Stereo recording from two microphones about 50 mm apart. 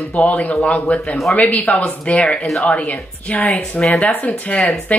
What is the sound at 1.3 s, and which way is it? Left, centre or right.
Speech, left.